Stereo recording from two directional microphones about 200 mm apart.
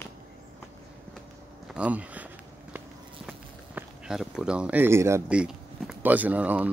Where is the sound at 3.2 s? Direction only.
Centre (ahead or behind).